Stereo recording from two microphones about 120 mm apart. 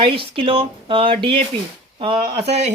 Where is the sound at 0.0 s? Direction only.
45° right (ahead or behind).